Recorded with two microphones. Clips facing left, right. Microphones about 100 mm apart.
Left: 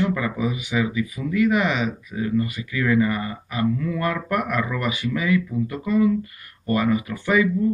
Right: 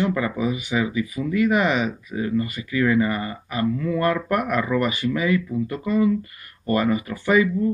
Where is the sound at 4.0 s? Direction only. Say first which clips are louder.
Right 4 dB; centre (ahead or behind).